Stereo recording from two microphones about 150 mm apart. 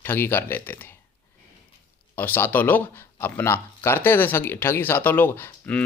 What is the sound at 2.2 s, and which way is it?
Speech, 15° left (ahead or behind).